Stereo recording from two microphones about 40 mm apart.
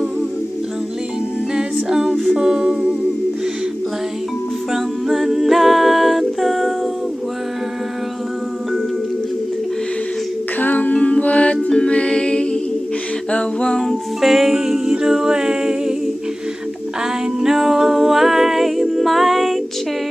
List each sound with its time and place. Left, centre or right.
1.5 s a capella: centre
4.7 s a capella: centre
10.6 s music: left
11.7 s a capella: left
13.3 s music: left
13.7 s music: centre
14.3 s a capella: centre
17.4 s music: centre